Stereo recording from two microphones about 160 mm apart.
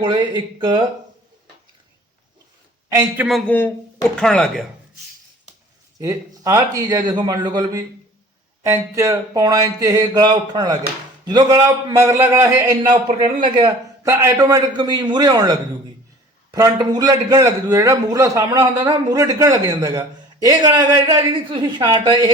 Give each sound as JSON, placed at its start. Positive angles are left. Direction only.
{"t": 0.0, "sound": "a man's voice", "side_deg": -30}
{"t": 3.2, "sound": "speech", "side_deg": 0}
{"t": 6.0, "sound": "a man's voice", "side_deg": -20}
{"t": 13.1, "sound": "a man's voice", "side_deg": -35}